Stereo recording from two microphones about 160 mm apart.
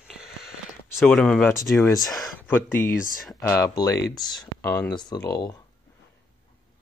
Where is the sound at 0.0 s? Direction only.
5° right (ahead or behind).